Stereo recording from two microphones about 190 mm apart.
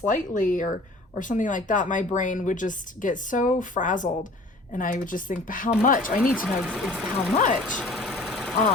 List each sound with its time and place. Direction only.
0.1 s speech: 45° left (ahead or behind)
6.4 s speech: 5° right (ahead or behind)
7.6 s sewing machine: centre (ahead or behind)